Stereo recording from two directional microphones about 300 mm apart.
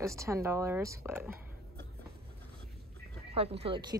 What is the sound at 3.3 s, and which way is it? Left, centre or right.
Speech, centre.